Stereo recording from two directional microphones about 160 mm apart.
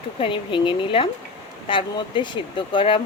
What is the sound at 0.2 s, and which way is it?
Speech, 30° left (ahead or behind).